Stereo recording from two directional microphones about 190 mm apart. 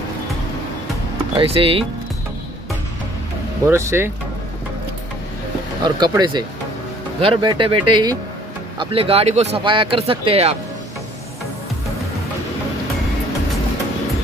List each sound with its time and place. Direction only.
1.3 s speech: 30° right (ahead or behind)
3.6 s speech: 15° right (ahead or behind)
5.9 s speech: 20° right (ahead or behind)